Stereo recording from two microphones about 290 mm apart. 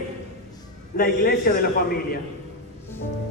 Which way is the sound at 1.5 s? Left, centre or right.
Left.